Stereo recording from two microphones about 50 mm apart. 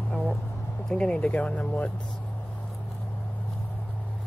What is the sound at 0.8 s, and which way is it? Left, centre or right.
Speech, centre.